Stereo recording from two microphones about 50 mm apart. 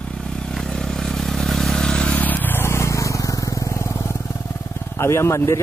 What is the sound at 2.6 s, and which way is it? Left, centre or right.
Vehicle, left.